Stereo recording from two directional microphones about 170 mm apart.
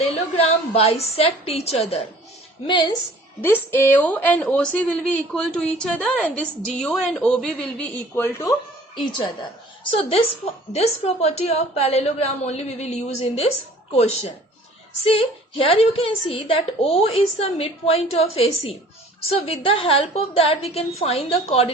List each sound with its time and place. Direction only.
0.0 s a woman's voice: 35° left (ahead or behind)
3.4 s a woman's voice: 10° left (ahead or behind)
9.0 s a woman's voice: 25° left (ahead or behind)